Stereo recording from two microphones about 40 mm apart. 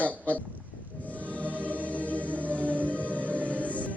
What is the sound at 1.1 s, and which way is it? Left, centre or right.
Music, right.